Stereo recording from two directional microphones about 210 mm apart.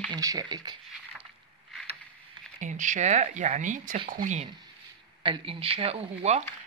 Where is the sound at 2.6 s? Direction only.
35° right (ahead or behind).